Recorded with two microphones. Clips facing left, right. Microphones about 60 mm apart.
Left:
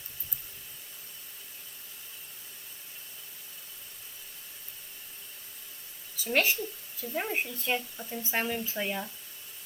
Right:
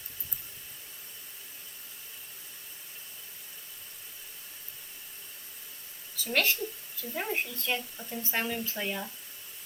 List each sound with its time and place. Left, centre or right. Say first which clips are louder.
6.2 s speech: left 1 dB; centre